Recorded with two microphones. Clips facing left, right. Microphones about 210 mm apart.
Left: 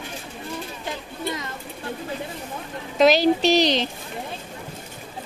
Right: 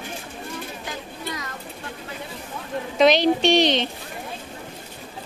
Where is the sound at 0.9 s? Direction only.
25° left (ahead or behind).